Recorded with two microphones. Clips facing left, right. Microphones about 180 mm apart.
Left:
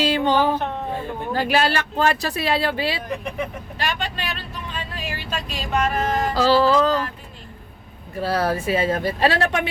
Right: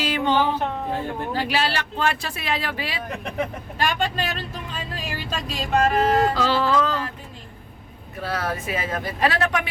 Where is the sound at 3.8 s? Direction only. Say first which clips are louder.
Right 4 dB; 50° right (ahead or behind).